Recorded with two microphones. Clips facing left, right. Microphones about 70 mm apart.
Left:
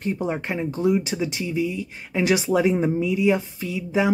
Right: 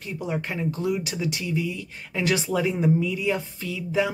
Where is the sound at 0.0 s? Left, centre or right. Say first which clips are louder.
Left 5 dB; left.